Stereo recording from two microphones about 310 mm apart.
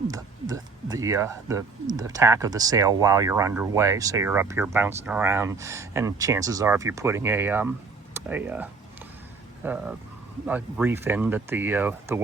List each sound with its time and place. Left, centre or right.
0.1 s speech: centre